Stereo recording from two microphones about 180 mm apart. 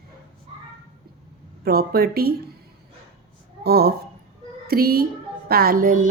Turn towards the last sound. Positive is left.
turn(degrees=-50)  # may be behind; listen again after turning